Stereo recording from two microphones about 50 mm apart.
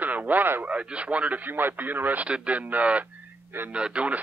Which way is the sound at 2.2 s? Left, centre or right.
Right.